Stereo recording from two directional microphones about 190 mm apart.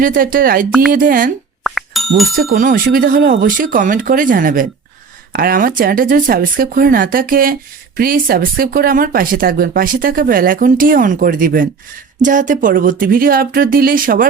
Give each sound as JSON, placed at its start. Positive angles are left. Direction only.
{"t": 0.0, "sound": "speech", "side_deg": -45}
{"t": 1.6, "sound": "music", "side_deg": 0}
{"t": 2.3, "sound": "speech", "side_deg": -50}